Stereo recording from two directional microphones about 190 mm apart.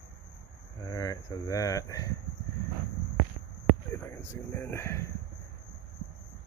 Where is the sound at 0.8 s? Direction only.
20° left (ahead or behind).